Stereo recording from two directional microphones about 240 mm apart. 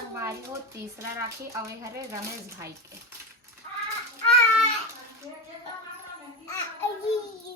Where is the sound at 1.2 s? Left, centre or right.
Centre.